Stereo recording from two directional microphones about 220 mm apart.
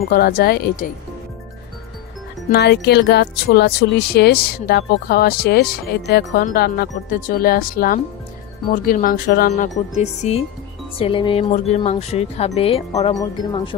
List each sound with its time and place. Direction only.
0.1 s speech: 45° left (ahead or behind)
2.5 s speech: 50° left (ahead or behind)
10.0 s speech: 30° left (ahead or behind)